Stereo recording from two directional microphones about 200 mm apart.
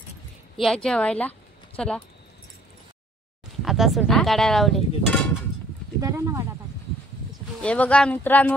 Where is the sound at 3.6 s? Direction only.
Centre (ahead or behind).